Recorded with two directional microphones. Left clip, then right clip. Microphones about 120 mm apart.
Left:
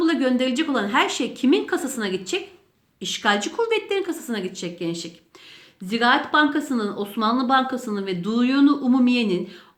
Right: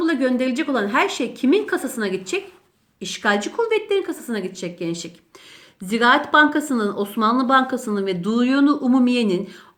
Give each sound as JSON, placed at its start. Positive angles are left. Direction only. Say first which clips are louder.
{"t": 0.0, "sound": "a woman's voice", "louder": "right 1 dB", "side_deg": -25}